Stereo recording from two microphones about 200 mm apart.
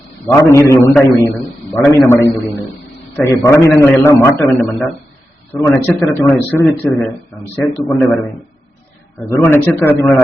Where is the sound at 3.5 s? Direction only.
15° left (ahead or behind).